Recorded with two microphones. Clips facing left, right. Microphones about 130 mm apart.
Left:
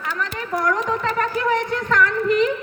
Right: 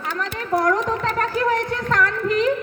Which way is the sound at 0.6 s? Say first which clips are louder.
Left 2 dB; 35° right (ahead or behind).